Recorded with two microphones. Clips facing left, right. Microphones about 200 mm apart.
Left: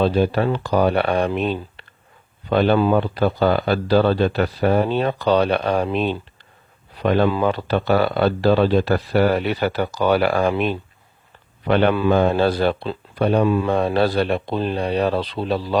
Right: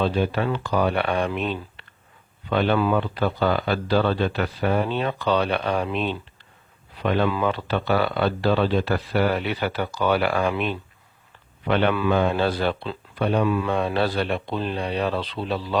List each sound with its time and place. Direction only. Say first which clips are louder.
0.0 s speech: left 5 dB; 35° left (ahead or behind)